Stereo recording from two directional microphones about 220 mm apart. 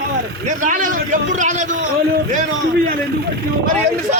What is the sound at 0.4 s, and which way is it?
A man's voice, 35° right (ahead or behind).